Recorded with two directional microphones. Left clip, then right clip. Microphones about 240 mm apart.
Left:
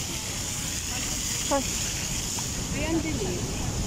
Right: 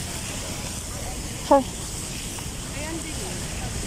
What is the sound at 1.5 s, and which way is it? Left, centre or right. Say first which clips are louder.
Speech: right 10 dB; right.